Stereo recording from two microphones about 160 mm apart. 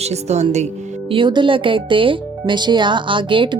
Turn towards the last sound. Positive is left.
turn(degrees=-30)  # may be behind; listen again after turning